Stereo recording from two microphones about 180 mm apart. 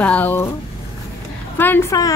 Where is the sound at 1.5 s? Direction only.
10° left (ahead or behind).